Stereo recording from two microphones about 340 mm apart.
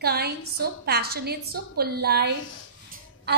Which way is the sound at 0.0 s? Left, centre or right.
Right.